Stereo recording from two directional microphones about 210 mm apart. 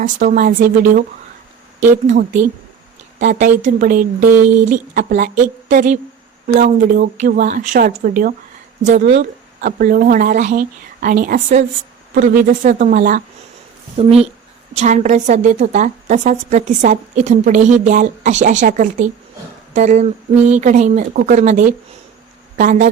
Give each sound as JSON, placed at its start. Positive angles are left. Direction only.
{"t": 0.0, "sound": "a woman's voice", "side_deg": -35}
{"t": 9.0, "sound": "a woman's voice", "side_deg": -30}
{"t": 12.6, "sound": "a woman's voice", "side_deg": -40}